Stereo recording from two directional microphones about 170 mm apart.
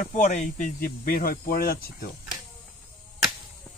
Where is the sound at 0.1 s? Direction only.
45° left (ahead or behind).